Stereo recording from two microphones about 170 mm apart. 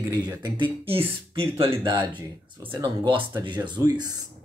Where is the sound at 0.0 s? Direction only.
20° right (ahead or behind).